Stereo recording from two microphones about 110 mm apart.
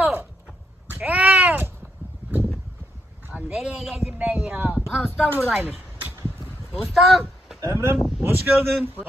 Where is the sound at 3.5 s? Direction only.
5° right (ahead or behind).